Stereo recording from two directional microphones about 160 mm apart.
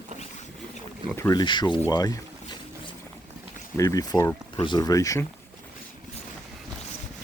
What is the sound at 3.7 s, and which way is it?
Speech, 20° left (ahead or behind).